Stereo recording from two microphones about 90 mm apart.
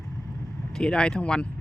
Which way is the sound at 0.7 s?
10° left (ahead or behind).